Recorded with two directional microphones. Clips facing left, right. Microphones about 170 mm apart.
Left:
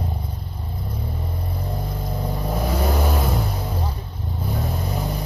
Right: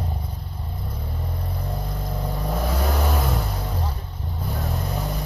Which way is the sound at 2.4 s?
Centre (ahead or behind).